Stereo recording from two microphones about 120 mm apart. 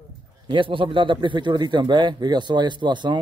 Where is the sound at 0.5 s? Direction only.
45° right (ahead or behind).